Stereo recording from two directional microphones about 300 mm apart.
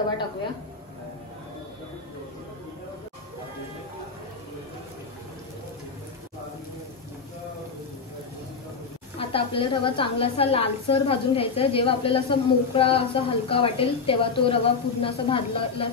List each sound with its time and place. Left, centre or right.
9.2 s a woman's voice: centre